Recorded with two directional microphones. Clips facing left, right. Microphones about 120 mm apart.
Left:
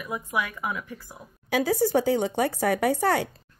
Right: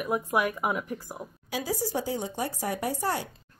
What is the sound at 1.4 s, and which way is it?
Speech, 60° left (ahead or behind).